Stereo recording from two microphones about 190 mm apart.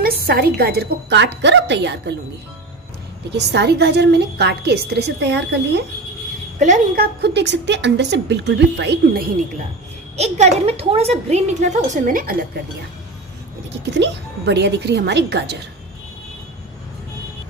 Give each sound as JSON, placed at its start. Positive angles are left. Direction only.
{"t": 0.0, "sound": "a woman's voice", "side_deg": -55}
{"t": 3.3, "sound": "a woman's voice", "side_deg": -60}
{"t": 6.6, "sound": "a woman's voice", "side_deg": -40}
{"t": 7.2, "sound": "a woman's voice", "side_deg": -60}
{"t": 10.1, "sound": "a woman's voice", "side_deg": -35}
{"t": 13.8, "sound": "a woman's voice", "side_deg": -65}